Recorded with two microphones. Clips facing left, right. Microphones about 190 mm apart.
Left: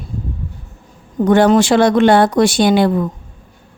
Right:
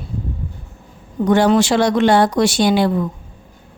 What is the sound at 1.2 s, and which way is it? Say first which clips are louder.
Speech: left 3 dB; 55° left (ahead or behind).